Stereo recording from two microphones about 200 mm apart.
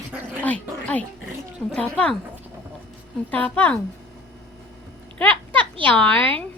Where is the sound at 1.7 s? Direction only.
5° left (ahead or behind).